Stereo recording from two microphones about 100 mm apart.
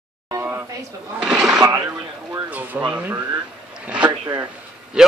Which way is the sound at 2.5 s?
15° right (ahead or behind).